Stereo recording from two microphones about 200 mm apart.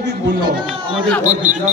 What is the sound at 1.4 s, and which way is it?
Speech, 40° right (ahead or behind).